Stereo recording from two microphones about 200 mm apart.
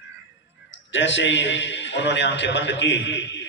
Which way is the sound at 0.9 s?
65° left (ahead or behind).